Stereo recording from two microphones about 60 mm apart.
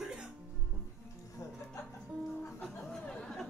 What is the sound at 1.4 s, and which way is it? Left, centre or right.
Music, left.